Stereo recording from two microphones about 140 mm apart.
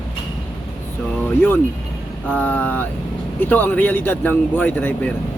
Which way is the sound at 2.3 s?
15° left (ahead or behind).